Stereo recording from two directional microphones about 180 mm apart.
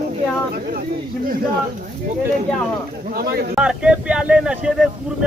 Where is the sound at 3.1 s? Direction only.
55° right (ahead or behind).